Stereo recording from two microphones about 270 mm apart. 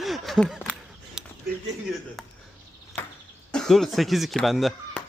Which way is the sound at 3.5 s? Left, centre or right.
Centre.